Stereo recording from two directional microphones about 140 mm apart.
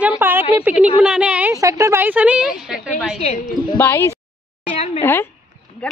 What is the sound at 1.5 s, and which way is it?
Speech, 25° right (ahead or behind).